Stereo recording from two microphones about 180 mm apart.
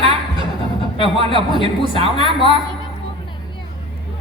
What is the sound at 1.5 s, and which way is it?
A woman's voice, 30° left (ahead or behind).